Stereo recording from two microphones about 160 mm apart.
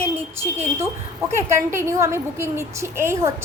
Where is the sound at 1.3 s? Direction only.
15° right (ahead or behind).